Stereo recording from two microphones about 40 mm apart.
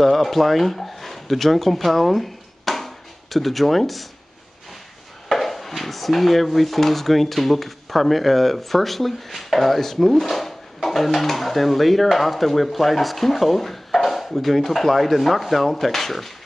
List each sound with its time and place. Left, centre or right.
0.0 s speech: centre
5.3 s speech: centre